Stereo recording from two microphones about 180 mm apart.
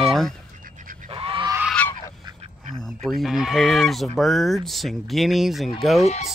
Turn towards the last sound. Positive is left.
turn(degrees=35)  # may be behind; listen again after turning